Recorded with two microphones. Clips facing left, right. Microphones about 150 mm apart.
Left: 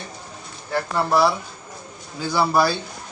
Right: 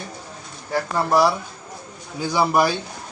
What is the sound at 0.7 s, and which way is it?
Speech, 10° right (ahead or behind).